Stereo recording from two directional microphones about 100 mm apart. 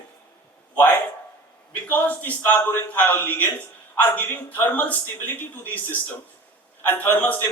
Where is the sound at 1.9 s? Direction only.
15° left (ahead or behind).